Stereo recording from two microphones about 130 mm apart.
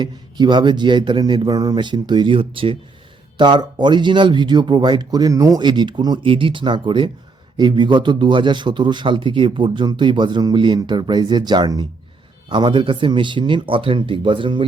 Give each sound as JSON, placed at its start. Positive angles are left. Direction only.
{"t": 0.0, "sound": "a man's voice", "side_deg": -35}